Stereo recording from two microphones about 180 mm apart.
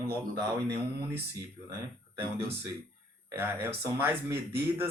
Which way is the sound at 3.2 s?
15° right (ahead or behind).